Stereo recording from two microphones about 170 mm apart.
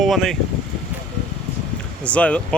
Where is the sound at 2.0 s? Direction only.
5° left (ahead or behind).